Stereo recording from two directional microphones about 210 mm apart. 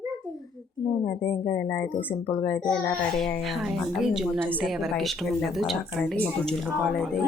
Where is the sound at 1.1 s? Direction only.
10° left (ahead or behind).